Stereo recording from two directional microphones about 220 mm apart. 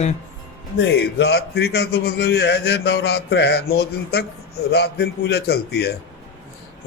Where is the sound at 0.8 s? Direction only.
50° left (ahead or behind).